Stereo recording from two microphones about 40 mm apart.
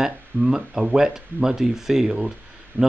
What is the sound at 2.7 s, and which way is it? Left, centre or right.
Speech, right.